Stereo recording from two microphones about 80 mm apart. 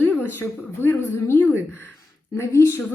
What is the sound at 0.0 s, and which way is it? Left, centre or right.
A woman's voice, left.